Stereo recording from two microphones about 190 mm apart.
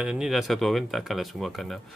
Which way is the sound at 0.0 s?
5° right (ahead or behind).